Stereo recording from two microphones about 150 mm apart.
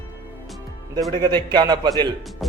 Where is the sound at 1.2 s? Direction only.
30° right (ahead or behind).